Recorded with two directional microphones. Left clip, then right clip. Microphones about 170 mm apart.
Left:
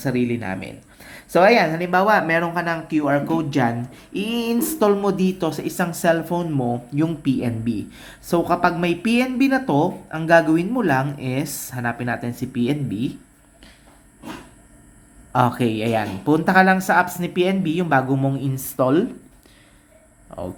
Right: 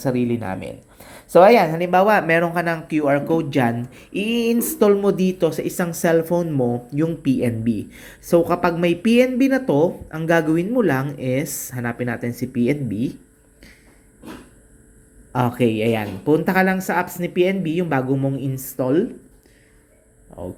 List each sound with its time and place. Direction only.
0.0 s speech: 10° right (ahead or behind)
15.3 s a woman's voice: centre (ahead or behind)
18.8 s speech: 10° left (ahead or behind)